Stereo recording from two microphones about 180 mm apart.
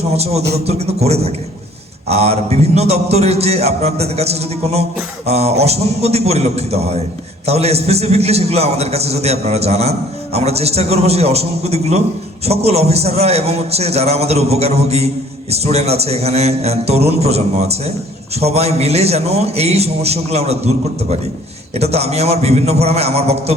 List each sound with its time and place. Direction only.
0.1 s a man's voice: 35° right (ahead or behind)
21.8 s a man's voice: 35° right (ahead or behind)